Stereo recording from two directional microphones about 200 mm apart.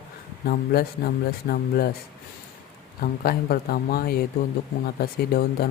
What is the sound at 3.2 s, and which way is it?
Speech, 50° left (ahead or behind).